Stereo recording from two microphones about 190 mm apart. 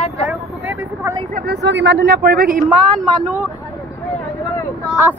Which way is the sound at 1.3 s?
55° right (ahead or behind).